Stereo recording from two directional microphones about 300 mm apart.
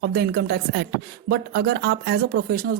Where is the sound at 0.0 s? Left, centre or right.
Right.